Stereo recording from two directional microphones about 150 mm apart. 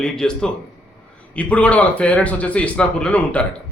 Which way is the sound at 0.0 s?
5° left (ahead or behind).